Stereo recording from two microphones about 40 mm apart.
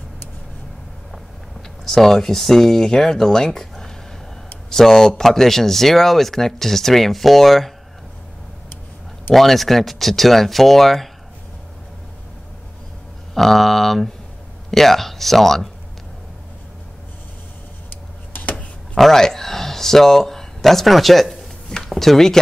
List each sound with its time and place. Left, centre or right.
1.9 s speech: centre
9.3 s speech: centre
13.3 s speech: centre
17.8 s a sound: left
18.9 s speech: centre